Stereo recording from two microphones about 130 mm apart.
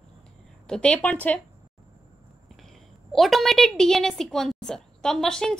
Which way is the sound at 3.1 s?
Centre (ahead or behind).